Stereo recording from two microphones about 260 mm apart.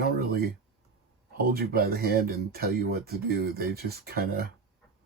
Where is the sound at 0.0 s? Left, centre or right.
Right.